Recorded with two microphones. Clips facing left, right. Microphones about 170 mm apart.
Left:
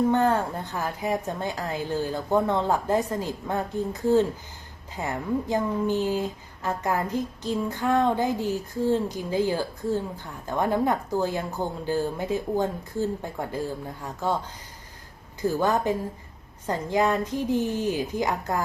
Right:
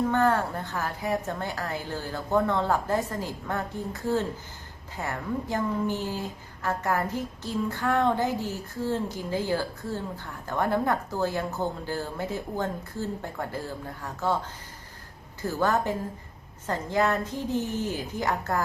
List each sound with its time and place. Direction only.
0.1 s a woman's voice: 15° left (ahead or behind)
15.4 s a woman's voice: 15° left (ahead or behind)